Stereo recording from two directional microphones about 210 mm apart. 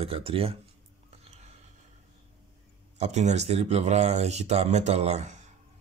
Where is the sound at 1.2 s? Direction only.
30° right (ahead or behind).